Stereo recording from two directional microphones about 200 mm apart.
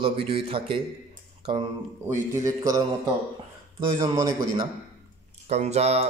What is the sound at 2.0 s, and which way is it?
Speech, 15° right (ahead or behind).